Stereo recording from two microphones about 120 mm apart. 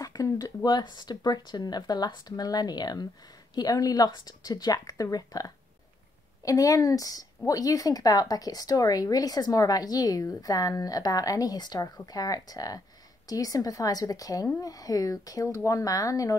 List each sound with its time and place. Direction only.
0.0 s speech: 30° left (ahead or behind)